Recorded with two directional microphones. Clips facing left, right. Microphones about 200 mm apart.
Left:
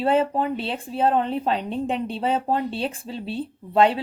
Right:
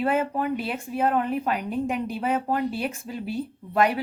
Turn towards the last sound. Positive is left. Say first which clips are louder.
# left 4 dB
turn(degrees=30)  # may be behind; listen again after turning